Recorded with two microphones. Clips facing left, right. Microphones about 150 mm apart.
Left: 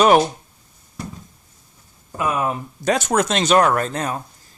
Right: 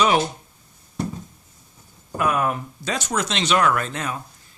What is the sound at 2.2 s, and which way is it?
Speech, 20° left (ahead or behind).